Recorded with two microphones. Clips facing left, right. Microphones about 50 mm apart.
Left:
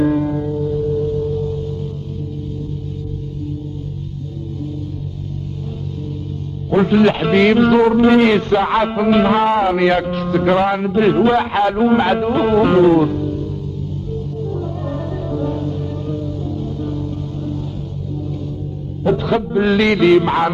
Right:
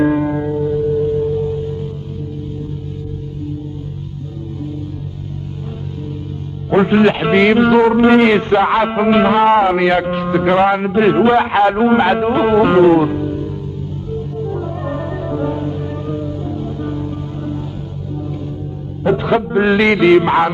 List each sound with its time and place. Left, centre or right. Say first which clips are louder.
0.0 s music: right 2 dB; right
0.7 s music: right 4 dB; centre
6.7 s a man's voice: right 1 dB; right
9.8 s a man's voice: right 1 dB; centre
14.1 s music: right 3 dB; right
19.0 s music: right 2 dB; right
19.6 s a man's voice: right 1 dB; right